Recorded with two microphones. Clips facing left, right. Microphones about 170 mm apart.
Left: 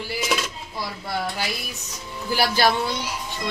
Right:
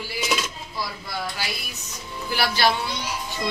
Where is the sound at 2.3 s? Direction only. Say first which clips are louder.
Left 2 dB; 45° left (ahead or behind).